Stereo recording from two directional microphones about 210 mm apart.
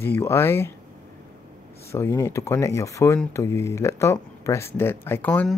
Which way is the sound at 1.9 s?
15° left (ahead or behind).